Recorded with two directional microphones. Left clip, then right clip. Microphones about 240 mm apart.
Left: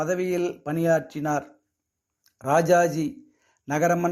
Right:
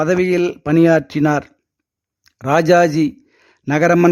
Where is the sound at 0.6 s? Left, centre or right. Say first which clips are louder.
Right 11 dB; right.